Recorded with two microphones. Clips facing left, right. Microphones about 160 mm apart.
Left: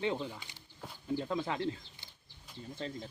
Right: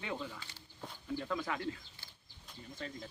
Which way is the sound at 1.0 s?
25° left (ahead or behind).